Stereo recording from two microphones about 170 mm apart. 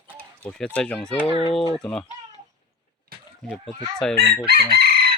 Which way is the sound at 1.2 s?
35° left (ahead or behind).